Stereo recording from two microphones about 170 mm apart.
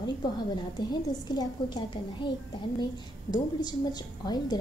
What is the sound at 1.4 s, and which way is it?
Speech, 25° left (ahead or behind).